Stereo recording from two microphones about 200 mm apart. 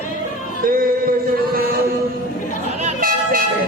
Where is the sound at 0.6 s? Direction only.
45° right (ahead or behind).